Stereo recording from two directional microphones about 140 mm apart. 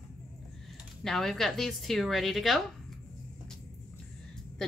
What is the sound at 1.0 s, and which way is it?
Speech, centre (ahead or behind).